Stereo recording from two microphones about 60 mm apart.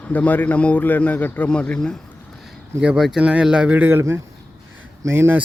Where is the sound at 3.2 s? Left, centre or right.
Centre.